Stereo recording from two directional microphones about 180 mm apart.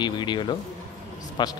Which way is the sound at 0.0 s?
25° left (ahead or behind).